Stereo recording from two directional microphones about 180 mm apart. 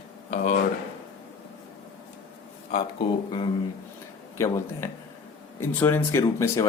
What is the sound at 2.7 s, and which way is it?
Speech, 30° left (ahead or behind).